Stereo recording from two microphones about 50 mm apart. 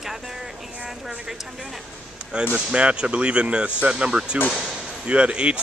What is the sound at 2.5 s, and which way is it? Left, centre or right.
Speech, right.